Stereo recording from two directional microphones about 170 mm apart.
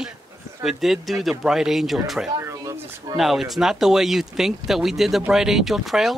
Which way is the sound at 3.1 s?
Centre (ahead or behind).